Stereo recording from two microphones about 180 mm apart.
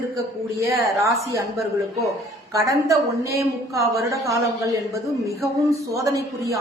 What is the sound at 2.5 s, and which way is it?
A woman's voice, 15° right (ahead or behind).